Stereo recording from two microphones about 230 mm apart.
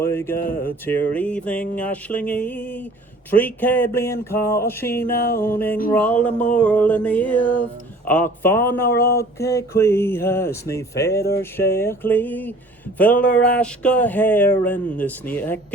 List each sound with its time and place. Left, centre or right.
0.0 s speech: centre
0.3 s speech: left
0.9 s speech: centre
5.0 s speech: left
5.4 s speech: centre
8.9 s speech: left
9.4 s speech: centre
11.2 s speech: left
11.5 s speech: centre